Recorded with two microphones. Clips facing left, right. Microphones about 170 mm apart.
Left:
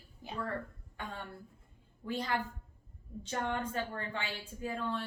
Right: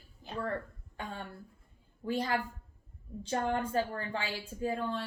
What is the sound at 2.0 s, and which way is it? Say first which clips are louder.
Speech: right 3 dB; 30° right (ahead or behind).